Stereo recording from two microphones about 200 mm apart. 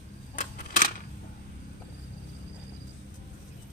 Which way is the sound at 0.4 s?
40° left (ahead or behind).